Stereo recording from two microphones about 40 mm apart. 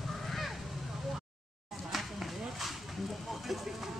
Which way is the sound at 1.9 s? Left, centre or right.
Centre.